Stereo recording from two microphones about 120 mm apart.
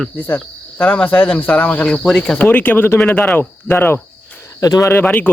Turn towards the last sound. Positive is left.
turn(degrees=15)  # may be behind; listen again after turning